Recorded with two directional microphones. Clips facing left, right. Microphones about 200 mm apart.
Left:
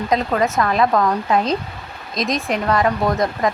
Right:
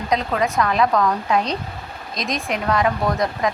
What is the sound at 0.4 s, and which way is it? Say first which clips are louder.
Speech: right 1 dB; centre (ahead or behind).